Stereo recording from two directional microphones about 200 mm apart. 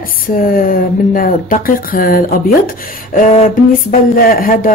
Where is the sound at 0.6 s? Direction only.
45° left (ahead or behind).